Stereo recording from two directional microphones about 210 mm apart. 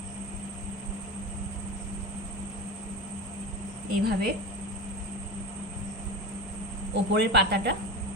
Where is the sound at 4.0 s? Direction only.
50° right (ahead or behind).